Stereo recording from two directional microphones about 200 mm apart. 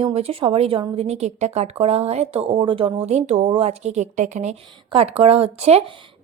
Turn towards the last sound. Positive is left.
turn(degrees=-30)  # may be behind; listen again after turning